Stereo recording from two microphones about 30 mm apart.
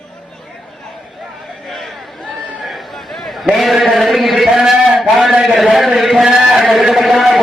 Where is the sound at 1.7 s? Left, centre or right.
Centre.